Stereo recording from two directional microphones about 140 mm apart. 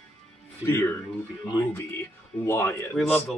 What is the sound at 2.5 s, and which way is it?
Speech, 15° left (ahead or behind).